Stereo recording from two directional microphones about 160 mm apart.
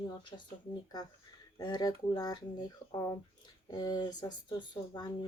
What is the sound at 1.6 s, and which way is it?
Speech, 25° left (ahead or behind).